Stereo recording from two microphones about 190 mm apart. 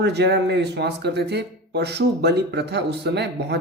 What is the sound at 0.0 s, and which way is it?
Speech, 65° right (ahead or behind).